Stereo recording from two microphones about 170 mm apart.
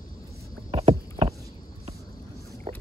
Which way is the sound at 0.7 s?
35° right (ahead or behind).